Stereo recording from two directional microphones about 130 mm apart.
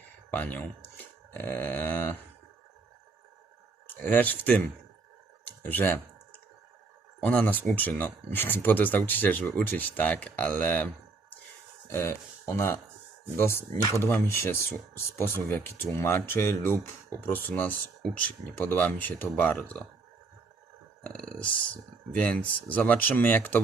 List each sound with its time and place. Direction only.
0.3 s speech: 10° left (ahead or behind)
3.9 s speech: 15° left (ahead or behind)
5.5 s a sound: 15° left (ahead or behind)
7.3 s speech: 10° left (ahead or behind)
11.9 s speech: 20° left (ahead or behind)
21.0 s speech: 10° left (ahead or behind)